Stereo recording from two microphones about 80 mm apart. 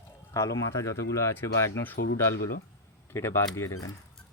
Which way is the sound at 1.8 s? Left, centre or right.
Left.